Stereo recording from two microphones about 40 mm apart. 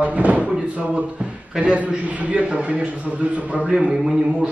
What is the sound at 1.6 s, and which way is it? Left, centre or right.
A man's voice, right.